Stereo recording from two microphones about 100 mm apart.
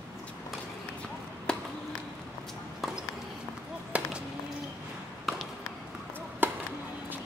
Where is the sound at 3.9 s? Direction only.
10° right (ahead or behind).